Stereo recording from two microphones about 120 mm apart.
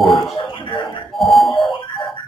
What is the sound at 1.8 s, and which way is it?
Music, 45° left (ahead or behind).